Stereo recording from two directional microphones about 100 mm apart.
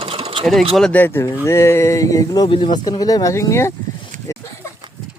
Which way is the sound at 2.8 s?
40° left (ahead or behind).